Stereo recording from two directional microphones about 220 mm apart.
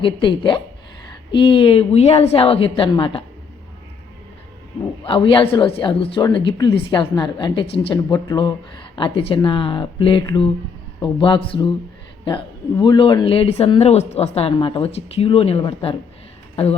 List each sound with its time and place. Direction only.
0.0 s speech: 20° left (ahead or behind)
5.0 s speech: 25° left (ahead or behind)